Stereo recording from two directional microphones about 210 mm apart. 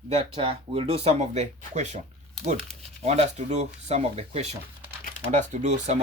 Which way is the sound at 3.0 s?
30° right (ahead or behind).